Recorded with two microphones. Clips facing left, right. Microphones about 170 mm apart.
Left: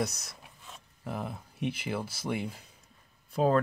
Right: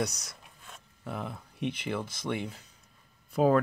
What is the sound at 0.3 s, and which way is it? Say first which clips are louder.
Speech: left 1 dB; centre (ahead or behind).